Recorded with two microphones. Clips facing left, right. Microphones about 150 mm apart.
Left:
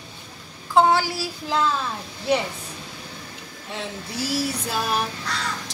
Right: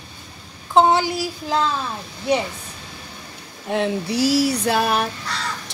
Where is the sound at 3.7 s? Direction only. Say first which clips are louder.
Right 12 dB; 70° right (ahead or behind).